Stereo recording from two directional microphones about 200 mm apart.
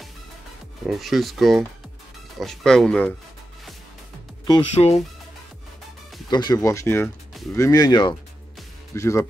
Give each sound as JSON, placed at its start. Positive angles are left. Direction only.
{"t": 0.8, "sound": "speech", "side_deg": 0}
{"t": 4.7, "sound": "fowl", "side_deg": 30}
{"t": 6.3, "sound": "speech", "side_deg": 20}